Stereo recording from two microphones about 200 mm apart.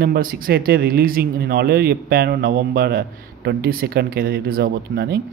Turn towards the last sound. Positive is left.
turn(degrees=-50)  # may be behind; listen again after turning